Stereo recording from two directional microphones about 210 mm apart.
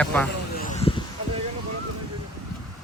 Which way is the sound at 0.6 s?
35° left (ahead or behind).